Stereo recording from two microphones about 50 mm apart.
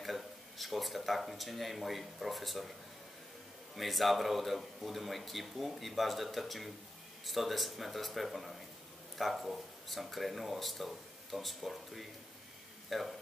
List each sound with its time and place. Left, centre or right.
0.0 s speech: centre
3.7 s speech: centre